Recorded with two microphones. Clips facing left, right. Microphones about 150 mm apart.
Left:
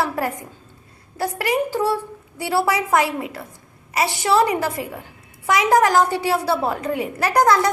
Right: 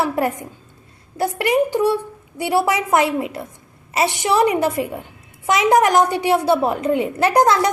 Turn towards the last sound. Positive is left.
turn(degrees=-20)  # may be behind; listen again after turning